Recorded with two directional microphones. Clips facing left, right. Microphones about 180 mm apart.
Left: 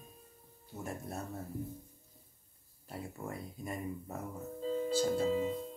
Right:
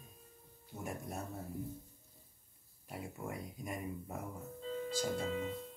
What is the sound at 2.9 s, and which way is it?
Speech, 15° right (ahead or behind).